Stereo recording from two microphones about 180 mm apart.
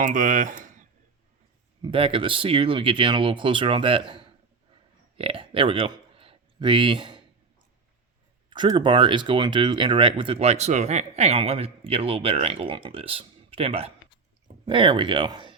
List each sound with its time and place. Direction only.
0.0 s speech: 45° right (ahead or behind)
1.8 s speech: 30° right (ahead or behind)
5.1 s a sound: 30° right (ahead or behind)
8.4 s speech: 25° right (ahead or behind)